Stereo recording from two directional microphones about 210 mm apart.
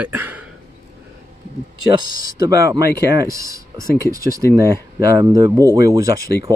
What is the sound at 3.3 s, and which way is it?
Speech, 15° right (ahead or behind).